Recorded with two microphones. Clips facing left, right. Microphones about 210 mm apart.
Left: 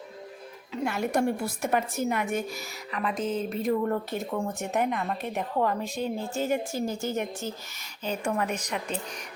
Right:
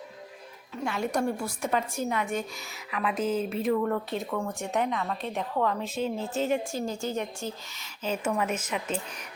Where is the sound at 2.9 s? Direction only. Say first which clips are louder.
Right 1 dB; 5° right (ahead or behind).